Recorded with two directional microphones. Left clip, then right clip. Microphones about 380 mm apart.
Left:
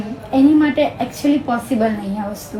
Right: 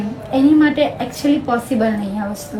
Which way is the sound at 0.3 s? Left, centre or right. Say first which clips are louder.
Even; centre.